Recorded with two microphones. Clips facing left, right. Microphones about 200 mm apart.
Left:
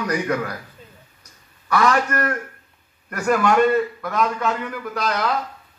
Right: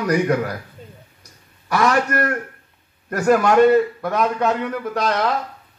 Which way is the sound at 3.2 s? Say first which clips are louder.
Right 4 dB; 40° right (ahead or behind).